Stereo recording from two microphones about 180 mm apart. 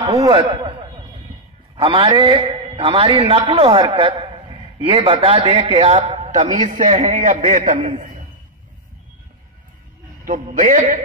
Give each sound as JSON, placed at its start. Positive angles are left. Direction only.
{"t": 0.0, "sound": "a man's voice", "side_deg": -20}
{"t": 10.2, "sound": "a man's voice", "side_deg": -50}